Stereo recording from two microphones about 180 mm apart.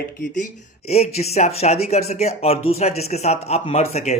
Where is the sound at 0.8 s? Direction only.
35° left (ahead or behind).